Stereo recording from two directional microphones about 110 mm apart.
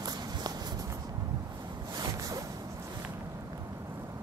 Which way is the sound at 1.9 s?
35° right (ahead or behind).